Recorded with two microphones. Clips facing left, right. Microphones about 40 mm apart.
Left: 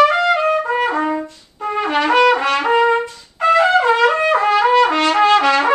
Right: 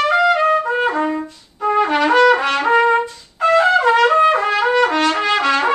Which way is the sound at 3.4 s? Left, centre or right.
Centre.